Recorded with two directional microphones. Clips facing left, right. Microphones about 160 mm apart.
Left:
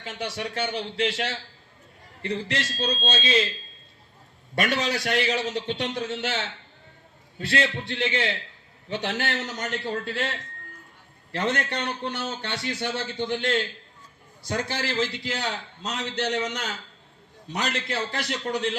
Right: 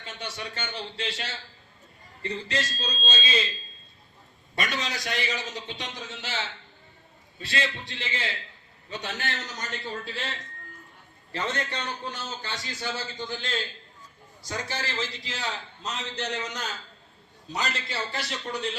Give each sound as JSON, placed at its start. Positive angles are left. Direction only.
{"t": 0.0, "sound": "a man's voice", "side_deg": 90}
{"t": 4.5, "sound": "a man's voice", "side_deg": 60}
{"t": 7.3, "sound": "a man's voice", "side_deg": 65}
{"t": 11.3, "sound": "a man's voice", "side_deg": 80}